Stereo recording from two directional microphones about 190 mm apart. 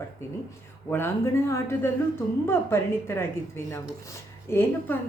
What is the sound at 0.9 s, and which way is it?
A woman's voice, 10° left (ahead or behind).